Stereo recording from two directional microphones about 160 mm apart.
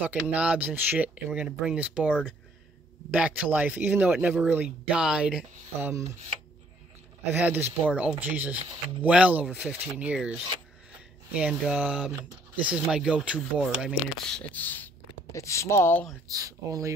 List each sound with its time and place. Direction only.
0.3 s speech: 10° right (ahead or behind)
7.3 s speech: 10° right (ahead or behind); by 16.1 s 15° left (ahead or behind)
16.3 s speech: 20° right (ahead or behind)